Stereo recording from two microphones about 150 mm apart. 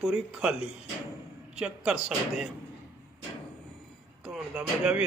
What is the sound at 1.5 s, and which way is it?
Speech, 5° right (ahead or behind).